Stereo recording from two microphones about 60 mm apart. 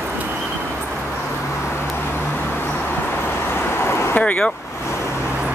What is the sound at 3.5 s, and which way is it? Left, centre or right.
Vehicle, left.